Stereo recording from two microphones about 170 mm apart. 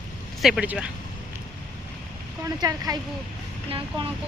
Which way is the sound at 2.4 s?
20° right (ahead or behind).